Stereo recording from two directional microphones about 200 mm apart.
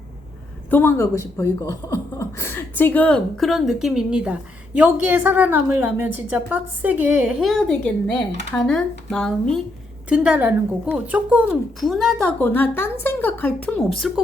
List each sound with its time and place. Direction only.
0.7 s speech: 10° left (ahead or behind)
10.1 s a woman's voice: 10° right (ahead or behind)